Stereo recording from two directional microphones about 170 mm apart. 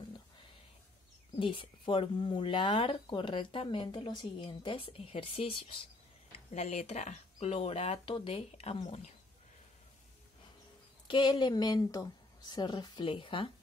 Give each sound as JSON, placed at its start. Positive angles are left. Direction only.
{"t": 1.3, "sound": "speech", "side_deg": 30}
{"t": 11.1, "sound": "a woman's voice", "side_deg": 25}